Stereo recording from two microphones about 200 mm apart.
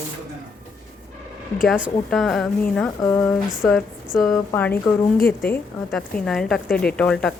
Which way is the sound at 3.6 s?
Centre (ahead or behind).